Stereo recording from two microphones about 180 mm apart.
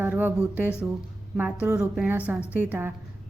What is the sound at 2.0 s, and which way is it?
Speech, 10° right (ahead or behind).